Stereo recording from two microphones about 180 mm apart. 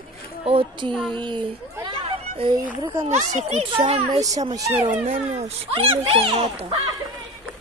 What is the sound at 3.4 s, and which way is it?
Speech, 40° right (ahead or behind).